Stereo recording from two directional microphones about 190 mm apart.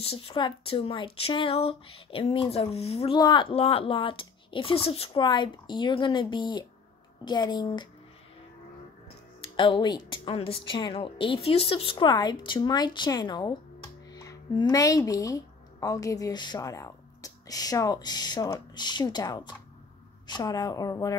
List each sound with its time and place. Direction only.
0.0 s speech: 30° left (ahead or behind)
9.6 s speech: 25° left (ahead or behind)